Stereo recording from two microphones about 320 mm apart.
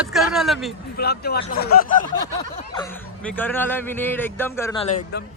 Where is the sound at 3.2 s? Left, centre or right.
Centre.